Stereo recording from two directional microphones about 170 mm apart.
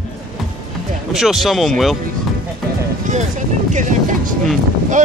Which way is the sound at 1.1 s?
Centre (ahead or behind).